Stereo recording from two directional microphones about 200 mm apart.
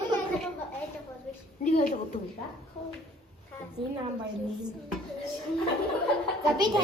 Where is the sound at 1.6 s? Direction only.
40° left (ahead or behind).